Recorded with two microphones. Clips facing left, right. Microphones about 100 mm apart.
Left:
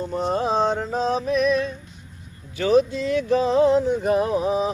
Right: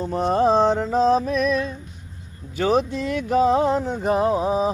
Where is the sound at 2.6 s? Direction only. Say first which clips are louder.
Left 2 dB; 45° right (ahead or behind).